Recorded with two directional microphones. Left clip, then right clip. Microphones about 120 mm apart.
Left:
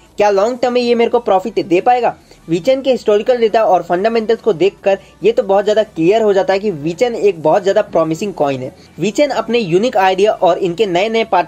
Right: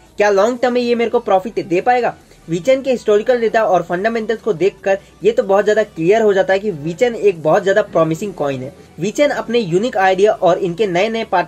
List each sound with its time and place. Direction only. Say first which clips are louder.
0.2 s speech: left 1 dB; 30° left (ahead or behind)